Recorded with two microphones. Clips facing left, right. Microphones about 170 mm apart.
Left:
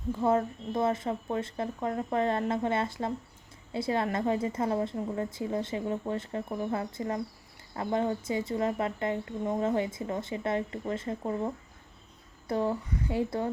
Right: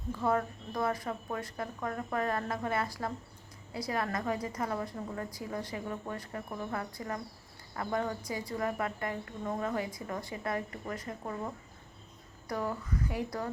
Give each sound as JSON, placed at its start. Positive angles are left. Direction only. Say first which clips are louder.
{"t": 0.2, "sound": "speech", "louder": "left 4 dB", "side_deg": 25}